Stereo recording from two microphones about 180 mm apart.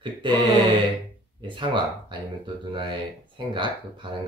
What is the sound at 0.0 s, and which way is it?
Speech, 25° right (ahead or behind).